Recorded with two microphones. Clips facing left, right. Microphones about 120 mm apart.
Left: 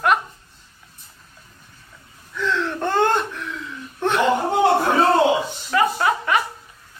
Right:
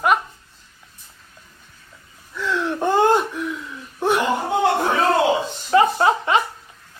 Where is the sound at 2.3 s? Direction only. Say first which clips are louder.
Even; 10° right (ahead or behind).